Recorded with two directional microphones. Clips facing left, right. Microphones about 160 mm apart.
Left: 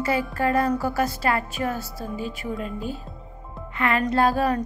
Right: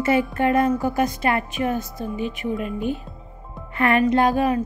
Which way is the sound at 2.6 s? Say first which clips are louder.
Right 5 dB; 35° left (ahead or behind).